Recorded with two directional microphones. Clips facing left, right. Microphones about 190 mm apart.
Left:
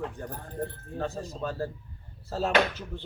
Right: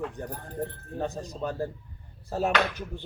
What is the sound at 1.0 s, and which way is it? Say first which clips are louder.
A man's voice: right 1 dB; 15° right (ahead or behind).